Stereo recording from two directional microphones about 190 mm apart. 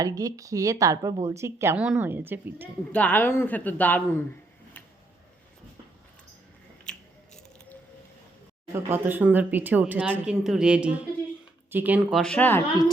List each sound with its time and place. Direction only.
0.0 s a woman's voice: 20° right (ahead or behind)
2.9 s a woman's voice: 10° left (ahead or behind)
6.9 s biting: 5° left (ahead or behind)
8.7 s a woman's voice: 10° right (ahead or behind)
12.2 s a woman's voice: 5° left (ahead or behind)